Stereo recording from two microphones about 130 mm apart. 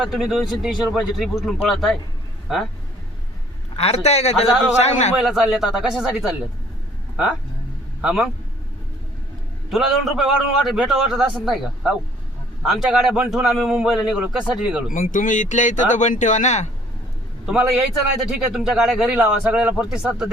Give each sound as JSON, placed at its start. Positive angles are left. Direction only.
{"t": 0.0, "sound": "a man's voice", "side_deg": -5}
{"t": 3.8, "sound": "a man's voice", "side_deg": 55}
{"t": 5.2, "sound": "a man's voice", "side_deg": -5}
{"t": 8.0, "sound": "a man's voice", "side_deg": -5}
{"t": 9.6, "sound": "a man's voice", "side_deg": 0}
{"t": 14.9, "sound": "speech", "side_deg": 90}
{"t": 17.4, "sound": "a man's voice", "side_deg": -5}